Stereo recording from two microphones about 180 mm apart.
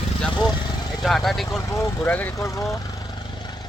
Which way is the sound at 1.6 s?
15° left (ahead or behind).